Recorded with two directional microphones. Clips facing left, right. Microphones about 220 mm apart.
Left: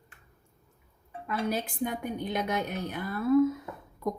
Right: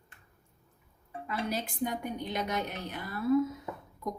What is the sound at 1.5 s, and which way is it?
A woman's voice, 50° left (ahead or behind).